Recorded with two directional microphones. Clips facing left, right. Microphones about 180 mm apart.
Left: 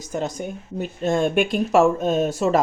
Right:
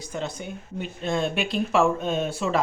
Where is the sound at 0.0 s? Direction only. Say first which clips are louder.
Left 5 dB; 45° left (ahead or behind).